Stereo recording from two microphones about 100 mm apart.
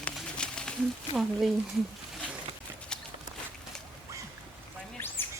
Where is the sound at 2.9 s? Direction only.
10° left (ahead or behind).